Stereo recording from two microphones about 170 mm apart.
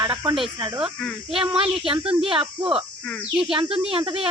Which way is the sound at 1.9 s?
30° right (ahead or behind).